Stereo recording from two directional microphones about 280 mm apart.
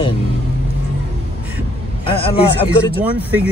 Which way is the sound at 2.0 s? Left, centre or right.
Centre.